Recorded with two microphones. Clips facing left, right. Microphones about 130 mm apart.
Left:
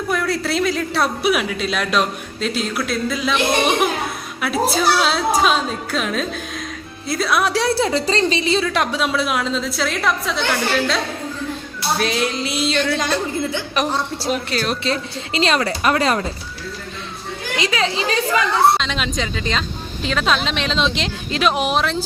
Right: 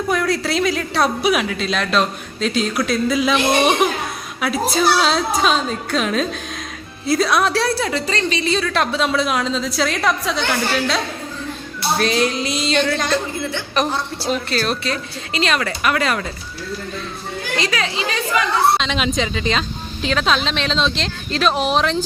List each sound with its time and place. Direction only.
0.1 s a woman's voice: centre (ahead or behind)
4.4 s a woman's voice: centre (ahead or behind); by 16.2 s 30° left (ahead or behind)
17.6 s speech: 25° left (ahead or behind)
18.8 s a woman's voice: 5° right (ahead or behind)